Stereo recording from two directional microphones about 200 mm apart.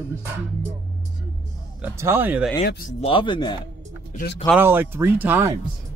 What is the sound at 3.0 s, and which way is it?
Speech, 25° left (ahead or behind).